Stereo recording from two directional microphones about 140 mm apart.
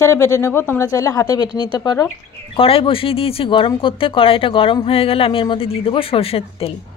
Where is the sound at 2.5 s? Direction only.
40° left (ahead or behind).